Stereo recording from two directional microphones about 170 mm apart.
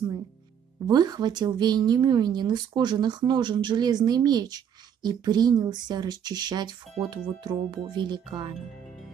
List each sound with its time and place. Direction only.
0.8 s speech: 25° right (ahead or behind)